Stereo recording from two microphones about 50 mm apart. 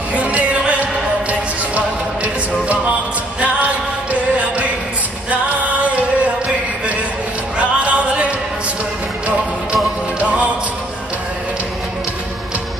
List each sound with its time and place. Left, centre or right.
0.1 s music: right
7.5 s music: right
10.1 s music: right